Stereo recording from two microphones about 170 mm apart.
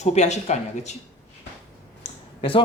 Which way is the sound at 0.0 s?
40° left (ahead or behind).